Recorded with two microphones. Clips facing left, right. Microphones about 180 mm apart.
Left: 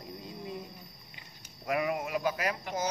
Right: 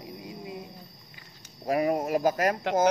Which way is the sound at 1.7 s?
40° right (ahead or behind).